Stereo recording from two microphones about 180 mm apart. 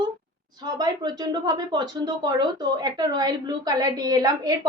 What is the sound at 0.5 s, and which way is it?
Speech, 20° right (ahead or behind).